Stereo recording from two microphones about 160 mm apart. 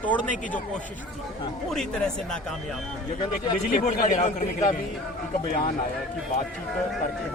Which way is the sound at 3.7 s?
55° left (ahead or behind).